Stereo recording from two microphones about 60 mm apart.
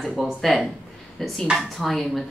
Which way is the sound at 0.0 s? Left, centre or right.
Centre.